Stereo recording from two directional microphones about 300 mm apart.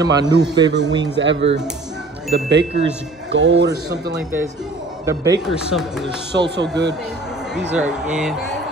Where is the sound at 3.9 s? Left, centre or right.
Centre.